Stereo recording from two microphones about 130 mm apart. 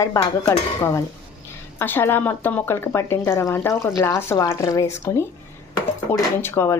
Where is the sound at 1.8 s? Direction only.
15° left (ahead or behind).